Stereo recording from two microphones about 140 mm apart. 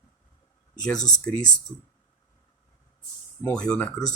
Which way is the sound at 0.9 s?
60° left (ahead or behind).